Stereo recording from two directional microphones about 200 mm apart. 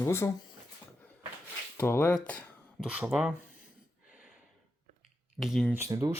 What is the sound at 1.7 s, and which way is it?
Speech, 10° left (ahead or behind).